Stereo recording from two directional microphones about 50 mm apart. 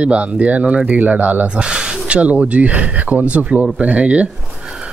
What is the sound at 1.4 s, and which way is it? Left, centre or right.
Speech, right.